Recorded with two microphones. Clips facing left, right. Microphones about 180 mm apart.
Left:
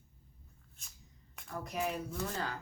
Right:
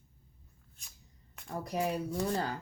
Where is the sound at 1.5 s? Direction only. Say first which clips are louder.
Right 4 dB; 35° right (ahead or behind).